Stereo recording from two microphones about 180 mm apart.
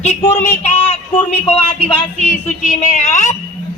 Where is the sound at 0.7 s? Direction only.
10° left (ahead or behind).